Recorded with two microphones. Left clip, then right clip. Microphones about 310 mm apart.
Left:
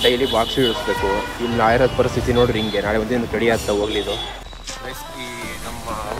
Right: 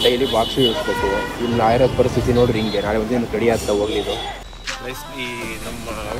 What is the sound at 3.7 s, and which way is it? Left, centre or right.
Speech, left.